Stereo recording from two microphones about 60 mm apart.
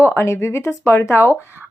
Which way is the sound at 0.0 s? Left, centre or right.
Left.